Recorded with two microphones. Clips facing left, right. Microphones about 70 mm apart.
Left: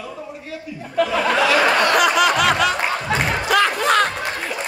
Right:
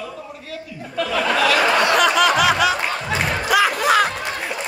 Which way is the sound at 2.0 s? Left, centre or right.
Centre.